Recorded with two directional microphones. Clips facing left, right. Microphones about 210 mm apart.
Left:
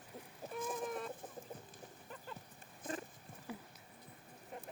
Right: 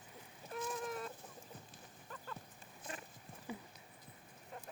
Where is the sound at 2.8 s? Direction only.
50° left (ahead or behind).